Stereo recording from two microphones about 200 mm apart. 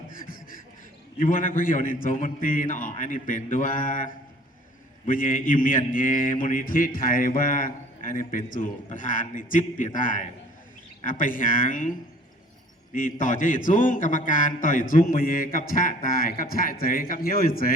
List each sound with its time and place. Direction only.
1.2 s a man's voice: 45° left (ahead or behind)
12.9 s a man's voice: 45° left (ahead or behind)